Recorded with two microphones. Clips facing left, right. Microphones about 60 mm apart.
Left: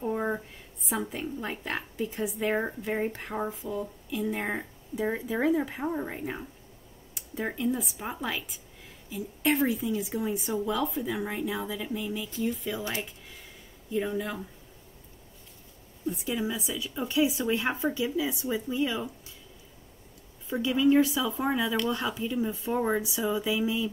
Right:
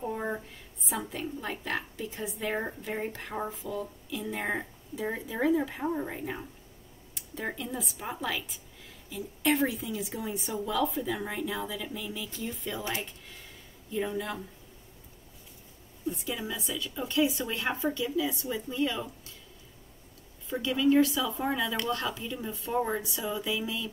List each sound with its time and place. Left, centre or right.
0.0 s a sound: centre
0.8 s a woman's voice: centre
2.5 s speech: centre
3.6 s speech: centre
4.1 s a woman's voice: centre
16.3 s speech: centre
20.4 s a woman's voice: centre